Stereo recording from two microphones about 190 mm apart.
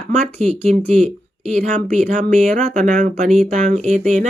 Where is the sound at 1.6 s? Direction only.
40° right (ahead or behind).